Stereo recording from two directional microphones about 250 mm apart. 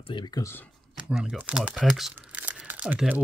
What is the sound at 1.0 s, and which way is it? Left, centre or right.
Crumpling, centre.